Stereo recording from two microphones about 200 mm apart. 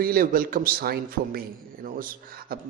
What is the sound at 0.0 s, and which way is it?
Speech, 45° right (ahead or behind).